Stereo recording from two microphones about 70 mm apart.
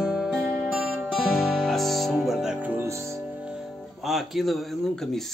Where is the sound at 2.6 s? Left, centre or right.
Right.